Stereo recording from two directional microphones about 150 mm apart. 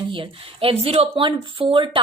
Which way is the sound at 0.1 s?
35° right (ahead or behind).